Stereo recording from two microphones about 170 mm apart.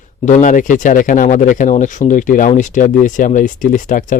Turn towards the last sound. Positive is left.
turn(degrees=50)  # may be behind; listen again after turning